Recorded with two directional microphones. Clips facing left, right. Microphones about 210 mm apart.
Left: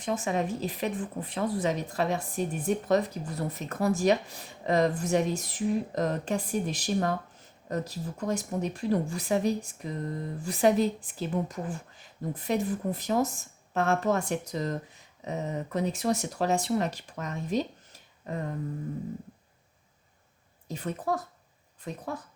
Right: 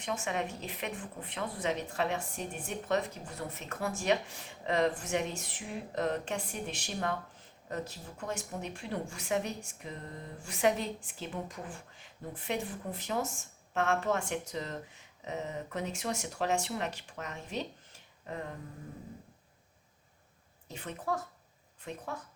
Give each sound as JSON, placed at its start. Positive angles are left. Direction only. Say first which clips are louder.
{"t": 0.0, "sound": "a woman's voice", "louder": "left 6 dB", "side_deg": 35}
{"t": 20.7, "sound": "a woman's voice", "louder": "left 5 dB", "side_deg": 40}